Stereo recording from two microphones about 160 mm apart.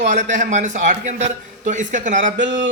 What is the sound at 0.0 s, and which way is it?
A man's voice, 50° right (ahead or behind).